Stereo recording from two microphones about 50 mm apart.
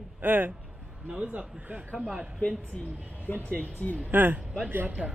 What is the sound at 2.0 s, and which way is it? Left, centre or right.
Speech, centre.